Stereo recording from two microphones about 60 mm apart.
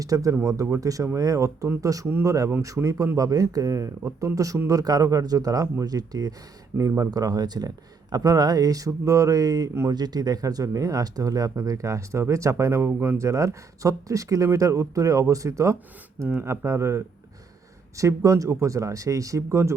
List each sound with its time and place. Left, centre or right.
0.0 s speech: right
0.4 s speech: right
6.7 s speech: right
8.9 s speech: right
10.0 s speech: right
16.2 s speech: right
17.9 s speech: right